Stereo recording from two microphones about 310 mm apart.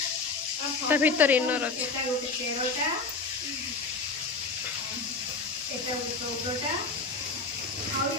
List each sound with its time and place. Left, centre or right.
0.8 s speech: centre